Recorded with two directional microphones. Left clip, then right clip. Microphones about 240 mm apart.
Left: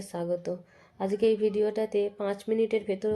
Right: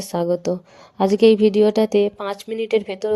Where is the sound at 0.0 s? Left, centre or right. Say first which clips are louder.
Right 10 dB; right.